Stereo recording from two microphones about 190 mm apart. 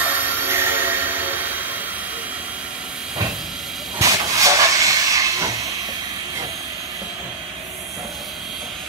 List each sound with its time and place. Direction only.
0.5 s music: 10° right (ahead or behind)
4.0 s steam: 15° right (ahead or behind)